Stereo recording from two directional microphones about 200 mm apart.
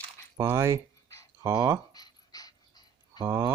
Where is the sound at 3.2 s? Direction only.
10° right (ahead or behind).